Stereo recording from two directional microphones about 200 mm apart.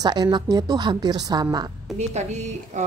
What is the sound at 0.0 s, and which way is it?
Speech, 20° right (ahead or behind).